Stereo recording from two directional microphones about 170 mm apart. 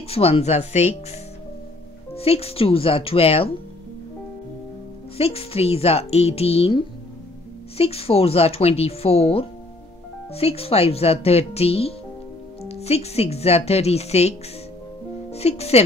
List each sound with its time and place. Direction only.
0.1 s speech: 35° left (ahead or behind)
2.1 s speech: 35° left (ahead or behind)
5.1 s speech: 35° left (ahead or behind)
15.3 s speech: 35° left (ahead or behind)